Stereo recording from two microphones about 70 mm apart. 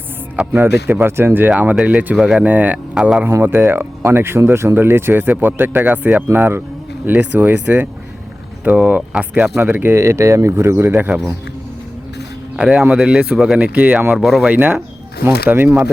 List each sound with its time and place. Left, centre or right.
0.5 s speech: right
2.9 s a man's voice: centre
3.4 s speech: right; by 9.5 s centre
9.6 s speech: right
9.9 s speech: right
10.8 s speech: right
12.5 s speech: centre
14.1 s speech: centre
14.5 s speech: right